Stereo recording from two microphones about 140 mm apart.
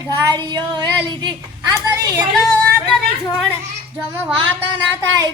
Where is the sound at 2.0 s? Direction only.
25° right (ahead or behind).